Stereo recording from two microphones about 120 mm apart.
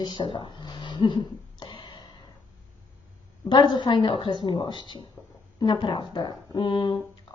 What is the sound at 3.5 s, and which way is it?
Speech, 40° left (ahead or behind).